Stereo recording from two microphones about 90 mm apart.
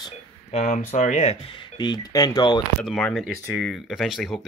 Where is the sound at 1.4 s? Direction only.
80° left.